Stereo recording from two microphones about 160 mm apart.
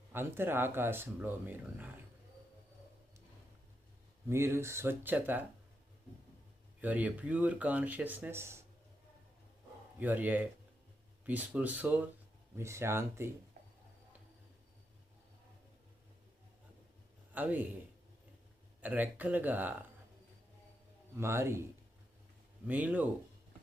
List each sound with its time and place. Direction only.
0.1 s speech: 15° right (ahead or behind)
4.3 s speech: 15° right (ahead or behind)
6.8 s speech: 10° right (ahead or behind)
10.0 s speech: 10° right (ahead or behind)
17.3 s speech: 10° right (ahead or behind)
18.8 s speech: 10° right (ahead or behind)
21.2 s speech: 15° right (ahead or behind)